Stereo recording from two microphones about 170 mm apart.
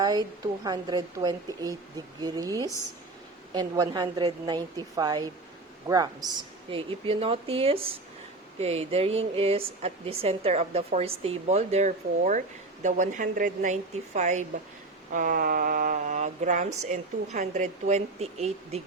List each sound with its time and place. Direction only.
0.0 s a woman's voice: 20° right (ahead or behind); by 18.8 s 40° right (ahead or behind)